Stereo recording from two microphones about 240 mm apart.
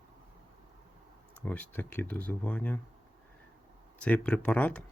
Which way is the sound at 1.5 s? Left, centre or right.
Centre.